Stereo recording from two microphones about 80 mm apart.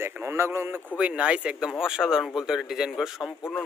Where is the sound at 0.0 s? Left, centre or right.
Right.